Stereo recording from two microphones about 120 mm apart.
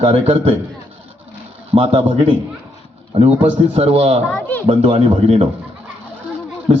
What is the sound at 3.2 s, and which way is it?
Speech, 10° right (ahead or behind).